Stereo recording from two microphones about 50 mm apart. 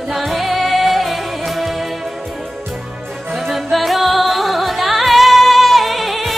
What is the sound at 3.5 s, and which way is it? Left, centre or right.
Music, centre.